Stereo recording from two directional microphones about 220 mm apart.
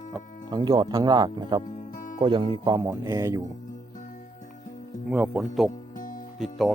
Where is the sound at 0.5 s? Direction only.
20° right (ahead or behind).